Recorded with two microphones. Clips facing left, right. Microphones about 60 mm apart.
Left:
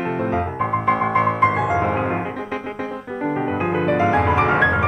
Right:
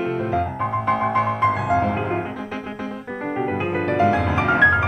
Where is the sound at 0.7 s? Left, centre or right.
Left.